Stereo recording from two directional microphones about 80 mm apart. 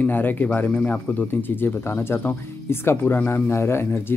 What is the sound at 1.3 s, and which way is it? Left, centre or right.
Speech, left.